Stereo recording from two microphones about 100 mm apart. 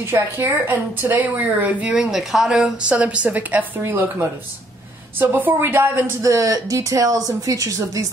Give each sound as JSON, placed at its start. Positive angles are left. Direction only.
{"t": 0.0, "sound": "a woman's voice", "side_deg": -25}
{"t": 6.2, "sound": "speech", "side_deg": -35}